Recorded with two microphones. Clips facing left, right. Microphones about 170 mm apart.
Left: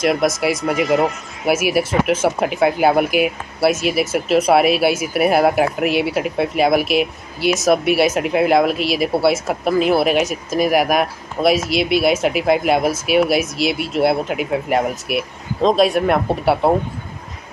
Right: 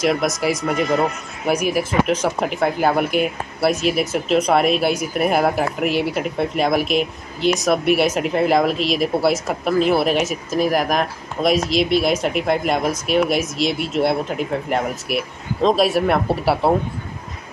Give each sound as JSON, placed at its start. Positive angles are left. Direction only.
{"t": 0.0, "sound": "speech", "side_deg": 0}
{"t": 1.7, "sound": "speech", "side_deg": 80}
{"t": 2.0, "sound": "speech", "side_deg": 5}